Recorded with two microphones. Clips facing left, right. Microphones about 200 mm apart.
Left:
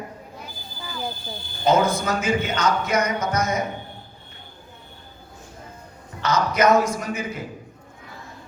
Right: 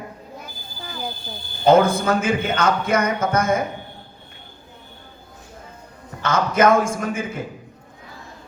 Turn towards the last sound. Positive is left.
turn(degrees=-50)  # may be behind; listen again after turning